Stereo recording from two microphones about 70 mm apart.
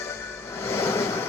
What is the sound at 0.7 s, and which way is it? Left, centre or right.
Train, left.